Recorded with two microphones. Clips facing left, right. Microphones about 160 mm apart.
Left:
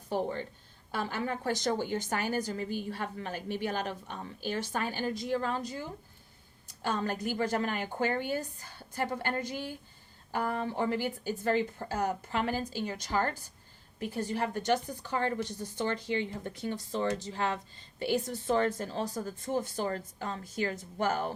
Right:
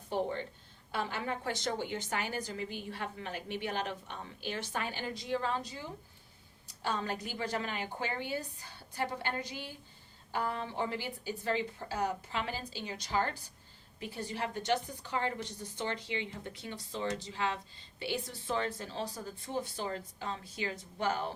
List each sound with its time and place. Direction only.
0.1 s a woman's voice: 40° left (ahead or behind)
6.8 s a woman's voice: 50° left (ahead or behind)